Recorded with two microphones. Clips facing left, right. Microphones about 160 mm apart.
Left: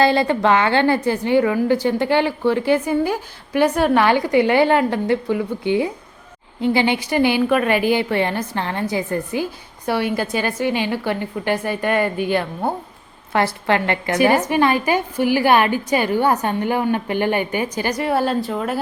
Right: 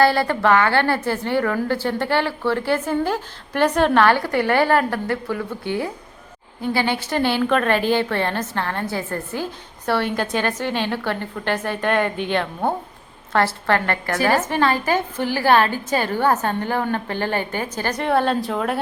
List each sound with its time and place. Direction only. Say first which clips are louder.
0.0 s a woman's voice: left 1 dB; 20° left (ahead or behind); by 18.8 s centre (ahead or behind)